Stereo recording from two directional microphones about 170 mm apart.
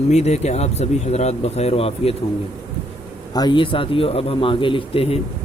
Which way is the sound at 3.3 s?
25° left (ahead or behind).